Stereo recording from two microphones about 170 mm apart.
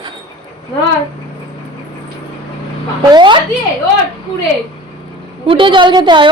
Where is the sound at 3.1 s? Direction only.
25° right (ahead or behind).